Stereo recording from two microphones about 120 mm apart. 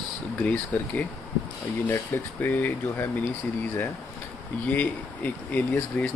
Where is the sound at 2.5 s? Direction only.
15° left (ahead or behind).